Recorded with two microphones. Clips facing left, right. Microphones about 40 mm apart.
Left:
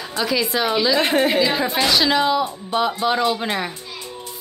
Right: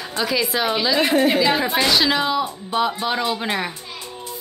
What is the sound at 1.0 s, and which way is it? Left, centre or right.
Speech, left.